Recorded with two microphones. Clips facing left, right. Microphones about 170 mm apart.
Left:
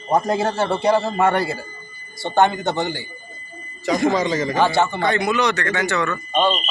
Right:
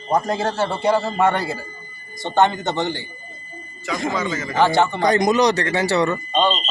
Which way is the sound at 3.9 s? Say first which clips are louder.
Left 5 dB; 35° left (ahead or behind).